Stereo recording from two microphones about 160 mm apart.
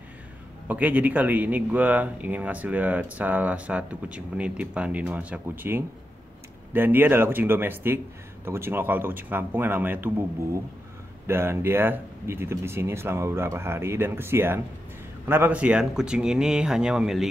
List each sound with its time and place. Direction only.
0.7 s speech: 10° right (ahead or behind)